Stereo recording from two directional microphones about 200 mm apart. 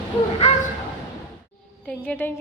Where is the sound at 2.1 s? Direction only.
10° left (ahead or behind).